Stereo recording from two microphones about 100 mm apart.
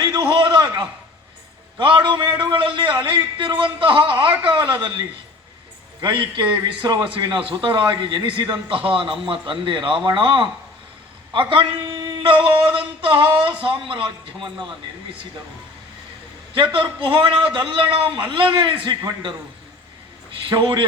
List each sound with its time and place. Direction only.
0.0 s a sound: 50° right (ahead or behind)
1.8 s a man's voice: 55° right (ahead or behind)
6.0 s a man's voice: 50° right (ahead or behind)
16.7 s a man's voice: 60° right (ahead or behind)
20.5 s a man's voice: 55° right (ahead or behind)